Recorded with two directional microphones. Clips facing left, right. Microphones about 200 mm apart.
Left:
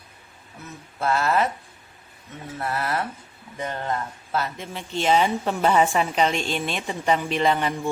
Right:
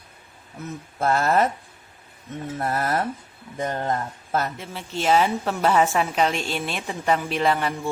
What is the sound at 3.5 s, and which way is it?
Speech, 40° right (ahead or behind).